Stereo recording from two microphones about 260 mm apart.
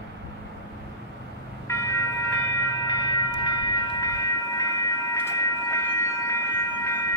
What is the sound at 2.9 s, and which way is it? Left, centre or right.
Train, centre.